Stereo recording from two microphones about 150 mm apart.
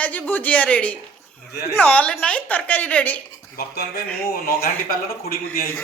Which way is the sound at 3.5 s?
90° left.